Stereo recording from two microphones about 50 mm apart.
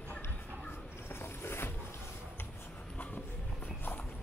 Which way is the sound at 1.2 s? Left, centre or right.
Left.